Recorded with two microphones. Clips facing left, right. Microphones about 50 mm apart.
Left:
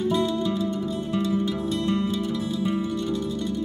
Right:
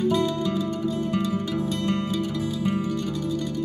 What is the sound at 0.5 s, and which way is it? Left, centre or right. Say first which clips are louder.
Music: even; right.